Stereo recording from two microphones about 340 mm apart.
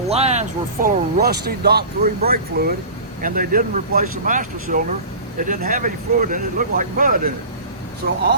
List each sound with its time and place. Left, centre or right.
0.1 s speech: centre